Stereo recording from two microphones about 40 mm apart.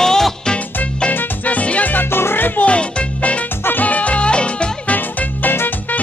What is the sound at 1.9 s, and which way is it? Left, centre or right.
Music, left.